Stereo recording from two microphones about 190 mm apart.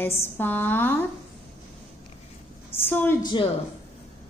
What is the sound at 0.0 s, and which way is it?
Speech, 10° left (ahead or behind).